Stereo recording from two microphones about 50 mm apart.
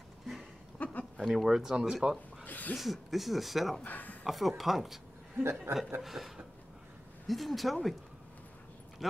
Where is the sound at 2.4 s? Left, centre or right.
Left.